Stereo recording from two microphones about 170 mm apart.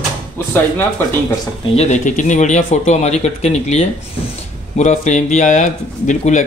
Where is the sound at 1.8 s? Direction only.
45° left (ahead or behind).